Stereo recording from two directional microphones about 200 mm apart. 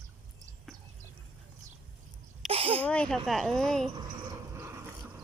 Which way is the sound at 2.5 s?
30° right (ahead or behind).